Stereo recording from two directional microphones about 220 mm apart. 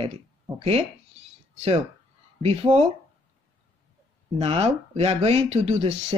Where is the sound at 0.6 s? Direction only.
30° right (ahead or behind).